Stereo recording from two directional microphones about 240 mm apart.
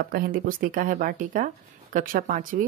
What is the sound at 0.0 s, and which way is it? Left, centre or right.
Speech, right.